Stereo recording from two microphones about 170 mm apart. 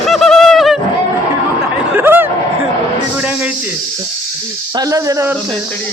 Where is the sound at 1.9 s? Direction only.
10° right (ahead or behind).